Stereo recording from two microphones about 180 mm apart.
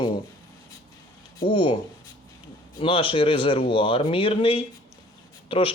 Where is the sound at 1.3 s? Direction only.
25° left (ahead or behind).